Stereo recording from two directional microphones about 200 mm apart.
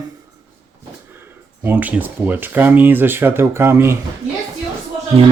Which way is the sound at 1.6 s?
10° right (ahead or behind).